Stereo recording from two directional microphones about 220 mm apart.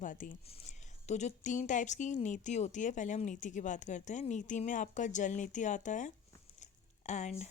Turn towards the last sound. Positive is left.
turn(degrees=30)  # may be behind; listen again after turning